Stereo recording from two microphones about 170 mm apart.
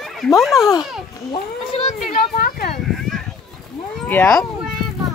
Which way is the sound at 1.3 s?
35° left (ahead or behind).